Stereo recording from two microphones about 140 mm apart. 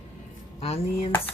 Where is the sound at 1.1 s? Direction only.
15° left (ahead or behind).